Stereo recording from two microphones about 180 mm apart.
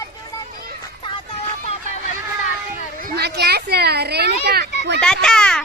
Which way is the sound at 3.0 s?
65° right (ahead or behind).